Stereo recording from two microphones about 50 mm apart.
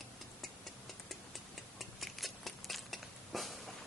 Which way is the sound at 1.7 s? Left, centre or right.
Centre.